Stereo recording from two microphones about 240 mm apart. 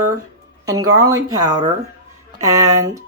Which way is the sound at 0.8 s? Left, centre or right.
Right.